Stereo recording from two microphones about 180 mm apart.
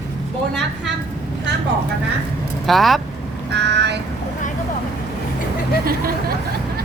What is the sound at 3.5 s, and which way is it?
Vehicle, 70° right (ahead or behind).